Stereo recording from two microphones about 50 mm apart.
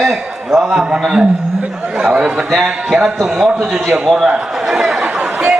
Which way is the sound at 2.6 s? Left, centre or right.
Centre.